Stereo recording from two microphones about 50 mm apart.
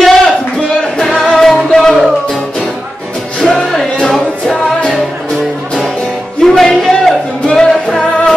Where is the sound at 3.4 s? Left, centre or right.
Centre.